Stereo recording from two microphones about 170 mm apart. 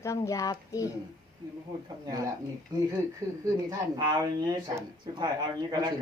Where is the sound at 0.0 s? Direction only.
20° left (ahead or behind).